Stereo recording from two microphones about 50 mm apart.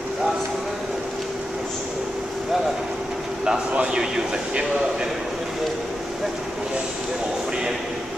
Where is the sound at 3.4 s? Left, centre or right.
Centre.